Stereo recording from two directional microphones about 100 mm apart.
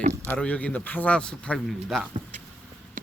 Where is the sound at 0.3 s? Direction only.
15° left (ahead or behind).